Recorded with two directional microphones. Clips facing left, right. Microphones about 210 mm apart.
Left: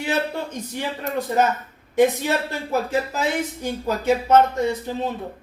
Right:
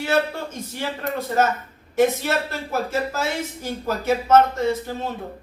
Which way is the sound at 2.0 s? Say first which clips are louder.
Left 1 dB; 15° left (ahead or behind).